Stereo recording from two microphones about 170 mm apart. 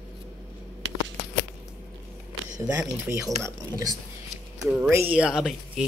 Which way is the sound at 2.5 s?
20° right (ahead or behind).